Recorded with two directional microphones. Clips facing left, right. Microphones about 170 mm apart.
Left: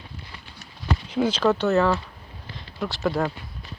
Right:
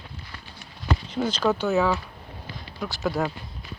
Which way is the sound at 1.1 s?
10° left (ahead or behind).